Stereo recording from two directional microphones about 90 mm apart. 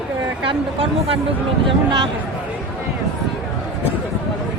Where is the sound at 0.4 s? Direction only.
90° right.